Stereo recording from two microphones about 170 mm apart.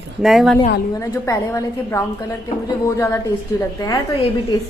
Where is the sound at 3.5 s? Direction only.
20° left (ahead or behind).